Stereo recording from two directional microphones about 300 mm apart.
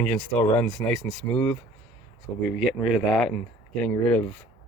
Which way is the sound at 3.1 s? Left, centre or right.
Centre.